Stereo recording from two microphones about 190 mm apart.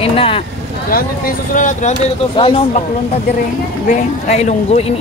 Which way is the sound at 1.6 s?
40° left (ahead or behind).